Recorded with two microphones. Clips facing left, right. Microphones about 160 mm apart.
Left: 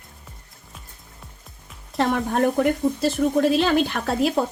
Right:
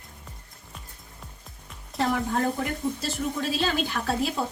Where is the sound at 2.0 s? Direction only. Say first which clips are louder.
Left 5 dB; 70° left (ahead or behind).